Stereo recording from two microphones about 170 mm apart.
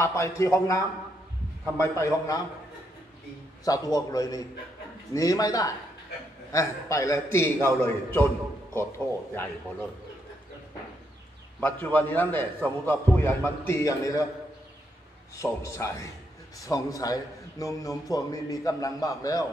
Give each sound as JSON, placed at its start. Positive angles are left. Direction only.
{"t": 0.0, "sound": "a man's voice", "side_deg": 15}
{"t": 3.6, "sound": "a man's voice", "side_deg": 20}
{"t": 9.3, "sound": "a man's voice", "side_deg": 10}
{"t": 11.6, "sound": "a man's voice", "side_deg": 10}
{"t": 15.3, "sound": "a man's voice", "side_deg": 15}